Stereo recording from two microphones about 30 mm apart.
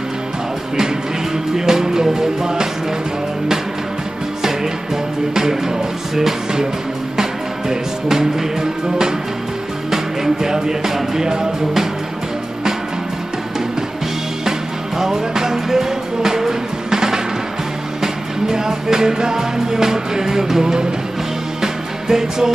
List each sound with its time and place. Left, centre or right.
1.6 s music: centre
5.3 s music: centre
15.0 s music: centre